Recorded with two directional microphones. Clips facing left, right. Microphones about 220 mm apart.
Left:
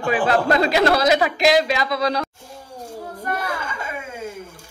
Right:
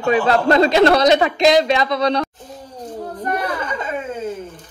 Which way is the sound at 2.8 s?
10° left (ahead or behind).